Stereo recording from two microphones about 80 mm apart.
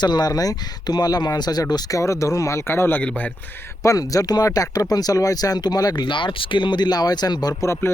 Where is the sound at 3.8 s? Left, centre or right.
Left.